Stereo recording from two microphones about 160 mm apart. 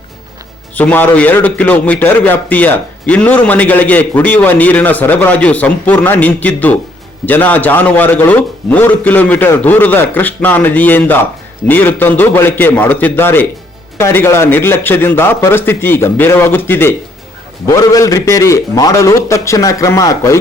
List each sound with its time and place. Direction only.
0.8 s a man's voice: 10° left (ahead or behind)